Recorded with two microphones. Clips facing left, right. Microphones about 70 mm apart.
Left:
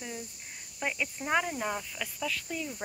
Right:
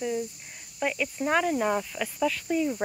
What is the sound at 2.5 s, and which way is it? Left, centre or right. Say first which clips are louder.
Speech: right 11 dB; right.